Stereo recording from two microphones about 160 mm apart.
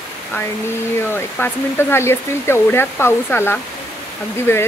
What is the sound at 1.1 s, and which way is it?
Speech, 15° left (ahead or behind).